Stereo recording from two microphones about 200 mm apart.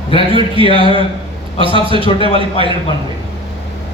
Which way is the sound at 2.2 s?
30° left (ahead or behind).